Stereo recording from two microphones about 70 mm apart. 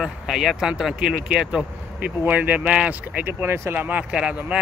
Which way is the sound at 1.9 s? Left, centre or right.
Right.